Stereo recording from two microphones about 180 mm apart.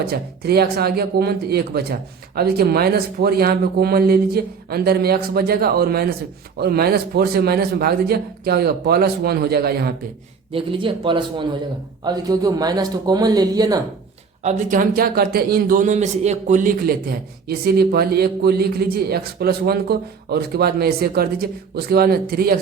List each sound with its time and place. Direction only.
0.0 s a man's voice: 60° right (ahead or behind)
10.5 s a man's voice: 30° right (ahead or behind)
14.4 s a man's voice: 50° right (ahead or behind)